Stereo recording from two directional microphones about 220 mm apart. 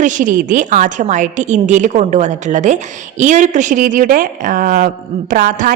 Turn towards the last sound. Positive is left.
turn(degrees=-35)  # may be behind; listen again after turning